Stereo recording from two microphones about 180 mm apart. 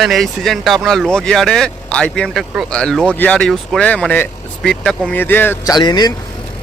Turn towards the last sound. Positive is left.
turn(degrees=25)  # may be behind; listen again after turning